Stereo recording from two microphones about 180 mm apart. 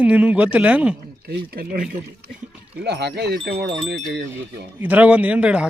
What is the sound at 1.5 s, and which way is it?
Speech, 55° right (ahead or behind).